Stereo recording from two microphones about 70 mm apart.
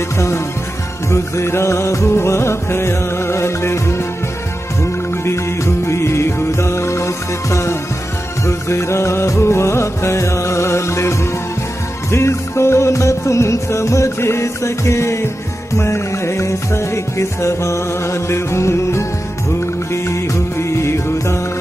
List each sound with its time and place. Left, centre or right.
1.1 s music: left
5.2 s music: left